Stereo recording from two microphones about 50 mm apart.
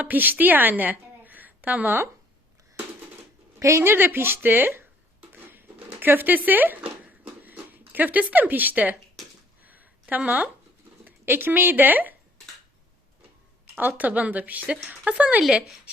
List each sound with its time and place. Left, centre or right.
0.0 s a woman's voice: right
3.6 s a woman's voice: right
5.3 s chopping: right
9.6 s a sound: right
11.0 s speech: right
13.7 s speech: right
15.4 s speech: centre